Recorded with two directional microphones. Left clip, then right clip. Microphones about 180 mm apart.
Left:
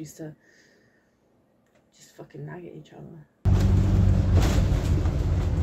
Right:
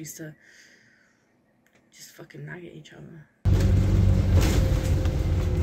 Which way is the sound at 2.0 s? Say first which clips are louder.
Left 1 dB; 25° left (ahead or behind).